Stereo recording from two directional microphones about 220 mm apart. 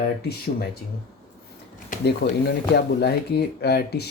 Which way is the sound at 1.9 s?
50° left (ahead or behind).